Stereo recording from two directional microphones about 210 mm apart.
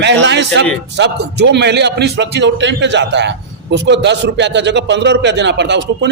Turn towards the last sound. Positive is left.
turn(degrees=-55)  # may be behind; listen again after turning